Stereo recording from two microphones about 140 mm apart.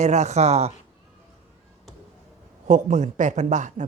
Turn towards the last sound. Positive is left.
turn(degrees=-60)  # may be behind; listen again after turning